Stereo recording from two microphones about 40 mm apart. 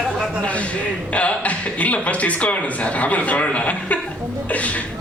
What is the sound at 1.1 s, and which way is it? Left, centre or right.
A man's voice, left.